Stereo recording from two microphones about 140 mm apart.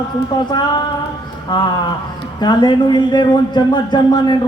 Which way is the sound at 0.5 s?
30° left (ahead or behind).